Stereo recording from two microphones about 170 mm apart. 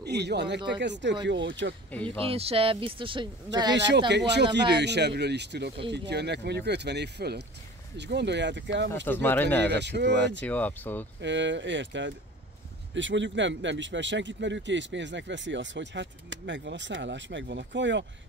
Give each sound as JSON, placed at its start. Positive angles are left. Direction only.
{"t": 0.0, "sound": "speech", "side_deg": -75}
{"t": 2.0, "sound": "speech", "side_deg": -35}
{"t": 3.7, "sound": "speech", "side_deg": -90}
{"t": 8.0, "sound": "speech", "side_deg": -90}
{"t": 9.0, "sound": "speech", "side_deg": 10}
{"t": 9.7, "sound": "speech", "side_deg": -85}
{"t": 10.4, "sound": "speech", "side_deg": 10}
{"t": 11.1, "sound": "speech", "side_deg": -90}